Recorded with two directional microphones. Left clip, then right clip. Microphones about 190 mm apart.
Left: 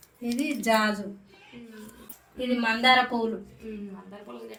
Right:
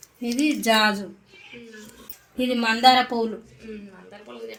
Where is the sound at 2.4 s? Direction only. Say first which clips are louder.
Right 4 dB; 55° right (ahead or behind).